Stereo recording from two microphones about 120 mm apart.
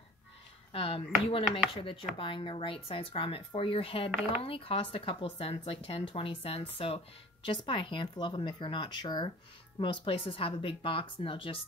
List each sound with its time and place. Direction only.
0.7 s speech: 50° left (ahead or behind)